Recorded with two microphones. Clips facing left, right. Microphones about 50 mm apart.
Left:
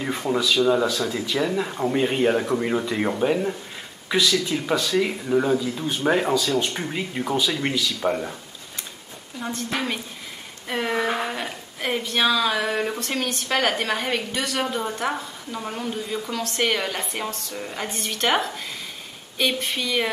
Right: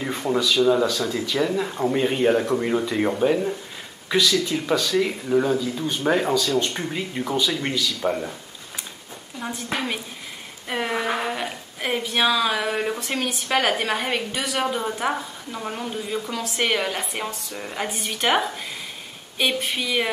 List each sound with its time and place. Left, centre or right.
0.0 s speech: centre
9.4 s speech: centre